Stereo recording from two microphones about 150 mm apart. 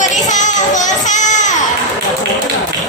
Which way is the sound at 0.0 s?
55° left (ahead or behind).